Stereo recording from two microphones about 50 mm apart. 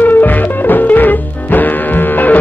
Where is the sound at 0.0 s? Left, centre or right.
Left.